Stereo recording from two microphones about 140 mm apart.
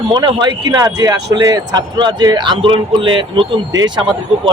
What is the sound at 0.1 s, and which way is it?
Speech, 35° right (ahead or behind).